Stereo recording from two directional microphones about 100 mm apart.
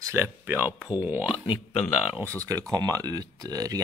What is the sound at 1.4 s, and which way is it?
Speech, 60° left (ahead or behind).